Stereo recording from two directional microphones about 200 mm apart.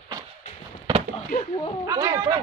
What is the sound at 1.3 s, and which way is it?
Speech, 30° left (ahead or behind).